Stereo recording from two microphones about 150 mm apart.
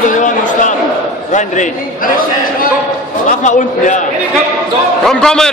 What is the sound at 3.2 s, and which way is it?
Speech, 55° left (ahead or behind).